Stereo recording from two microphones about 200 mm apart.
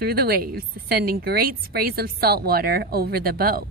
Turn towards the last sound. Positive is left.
turn(degrees=-50)  # may be behind; listen again after turning